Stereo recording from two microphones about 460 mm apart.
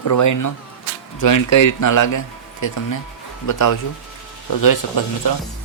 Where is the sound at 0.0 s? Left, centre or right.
Left.